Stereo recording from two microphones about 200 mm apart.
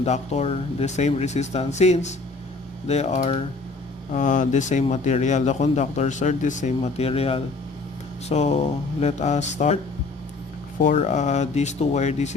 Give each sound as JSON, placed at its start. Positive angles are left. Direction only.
{"t": 0.0, "sound": "speech", "side_deg": 30}
{"t": 10.8, "sound": "speech", "side_deg": 40}